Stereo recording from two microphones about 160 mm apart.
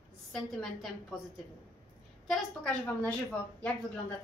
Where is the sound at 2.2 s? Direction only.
10° left (ahead or behind).